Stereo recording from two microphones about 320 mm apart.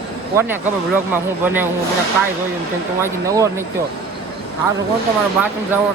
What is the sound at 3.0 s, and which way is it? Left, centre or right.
Speech, centre.